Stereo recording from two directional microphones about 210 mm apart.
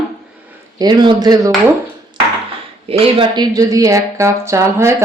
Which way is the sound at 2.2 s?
25° right (ahead or behind).